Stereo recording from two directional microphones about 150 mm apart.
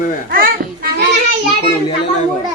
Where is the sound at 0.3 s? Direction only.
80° right.